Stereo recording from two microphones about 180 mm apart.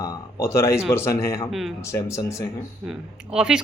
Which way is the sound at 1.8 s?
15° left (ahead or behind).